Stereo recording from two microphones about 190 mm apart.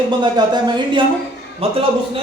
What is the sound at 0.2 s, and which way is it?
A man's voice, 25° right (ahead or behind).